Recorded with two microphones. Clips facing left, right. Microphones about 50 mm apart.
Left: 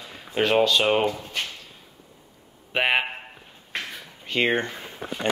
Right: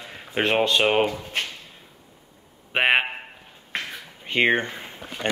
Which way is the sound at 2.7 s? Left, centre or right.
Right.